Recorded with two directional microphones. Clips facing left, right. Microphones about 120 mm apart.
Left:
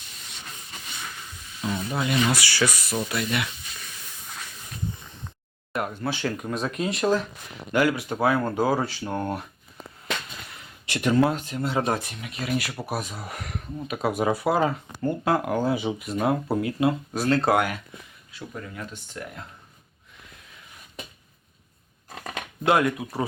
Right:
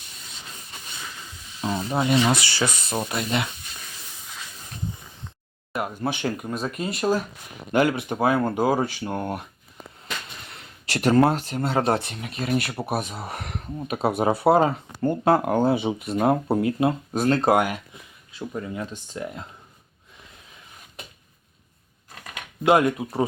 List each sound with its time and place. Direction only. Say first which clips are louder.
1.6 s speech: right 3 dB; 30° right (ahead or behind)
5.7 s speech: even; 5° right (ahead or behind)
6.0 s speech: right 2 dB; 20° right (ahead or behind)
6.3 s speech: even; 5° right (ahead or behind)
7.7 s speech: right 2 dB; 25° right (ahead or behind)
10.9 s speech: right 3 dB; 40° right (ahead or behind)
12.7 s speech: right 3 dB; 25° right (ahead or behind)
22.6 s speech: right 3 dB; 20° right (ahead or behind)